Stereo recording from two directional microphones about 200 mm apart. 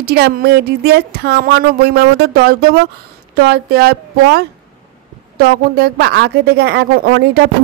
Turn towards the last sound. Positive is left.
turn(degrees=-50)  # may be behind; listen again after turning